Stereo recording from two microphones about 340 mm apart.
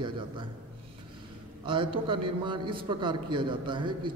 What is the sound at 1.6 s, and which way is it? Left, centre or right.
Speech, centre.